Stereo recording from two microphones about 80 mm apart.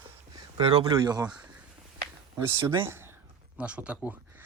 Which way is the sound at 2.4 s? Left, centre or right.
Right.